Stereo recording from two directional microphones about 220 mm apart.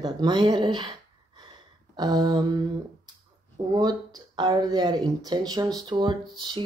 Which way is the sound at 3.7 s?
15° right (ahead or behind).